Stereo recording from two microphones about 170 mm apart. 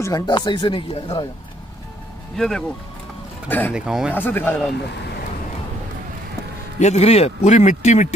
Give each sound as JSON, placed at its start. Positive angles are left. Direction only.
{"t": 0.0, "sound": "speech", "side_deg": 25}
{"t": 2.3, "sound": "speech", "side_deg": 5}
{"t": 3.7, "sound": "speech", "side_deg": -5}
{"t": 4.1, "sound": "speech", "side_deg": 10}
{"t": 6.8, "sound": "a man's voice", "side_deg": 40}